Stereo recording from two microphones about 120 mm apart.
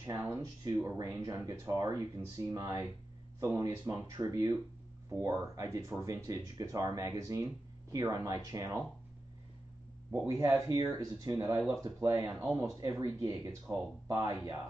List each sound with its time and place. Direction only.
0.0 s speech: 25° right (ahead or behind)
10.1 s speech: 25° right (ahead or behind)